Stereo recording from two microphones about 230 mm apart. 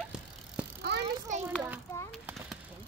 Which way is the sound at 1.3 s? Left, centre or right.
Right.